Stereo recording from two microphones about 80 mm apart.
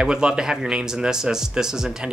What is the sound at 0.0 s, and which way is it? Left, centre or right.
Speech, centre.